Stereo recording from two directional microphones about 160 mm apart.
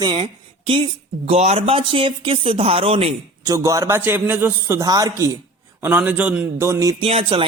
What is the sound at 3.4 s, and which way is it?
A man's voice, 20° right (ahead or behind).